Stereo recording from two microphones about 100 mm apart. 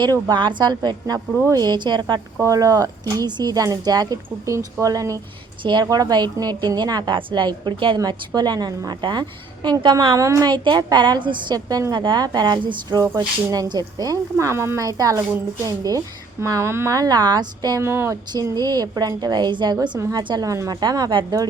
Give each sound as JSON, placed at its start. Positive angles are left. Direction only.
{"t": 0.0, "sound": "a woman's voice", "side_deg": -45}
{"t": 2.4, "sound": "speech", "side_deg": -35}
{"t": 5.6, "sound": "a woman's voice", "side_deg": -45}
{"t": 7.9, "sound": "a woman's voice", "side_deg": -40}
{"t": 10.5, "sound": "a woman's voice", "side_deg": -50}
{"t": 17.7, "sound": "speech", "side_deg": -25}
{"t": 18.3, "sound": "a woman's voice", "side_deg": -40}
{"t": 20.0, "sound": "speech", "side_deg": -35}